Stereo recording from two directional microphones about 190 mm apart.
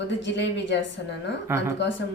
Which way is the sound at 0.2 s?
70° left (ahead or behind).